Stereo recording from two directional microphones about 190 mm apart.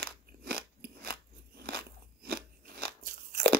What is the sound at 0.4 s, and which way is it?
Crunch, 55° right (ahead or behind).